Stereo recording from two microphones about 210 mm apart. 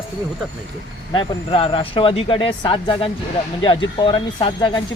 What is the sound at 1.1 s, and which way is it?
Speech, 25° left (ahead or behind).